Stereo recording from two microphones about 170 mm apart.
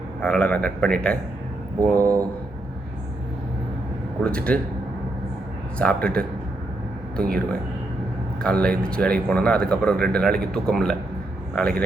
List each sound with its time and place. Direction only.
0.2 s speech: 5° left (ahead or behind)
1.8 s speech: 20° right (ahead or behind)
4.2 s speech: 5° left (ahead or behind)
5.8 s speech: 5° left (ahead or behind)